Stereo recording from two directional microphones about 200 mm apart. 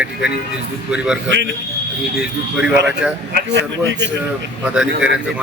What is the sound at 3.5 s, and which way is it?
Speech, 60° right (ahead or behind).